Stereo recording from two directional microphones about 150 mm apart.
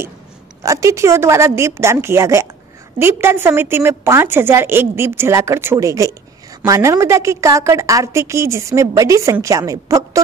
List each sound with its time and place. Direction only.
0.7 s a woman's voice: 20° right (ahead or behind)